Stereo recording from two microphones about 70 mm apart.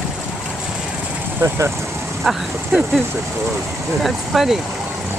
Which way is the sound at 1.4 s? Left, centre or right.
Right.